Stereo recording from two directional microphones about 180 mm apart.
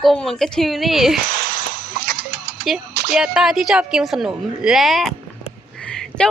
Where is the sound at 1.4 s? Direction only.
60° right (ahead or behind).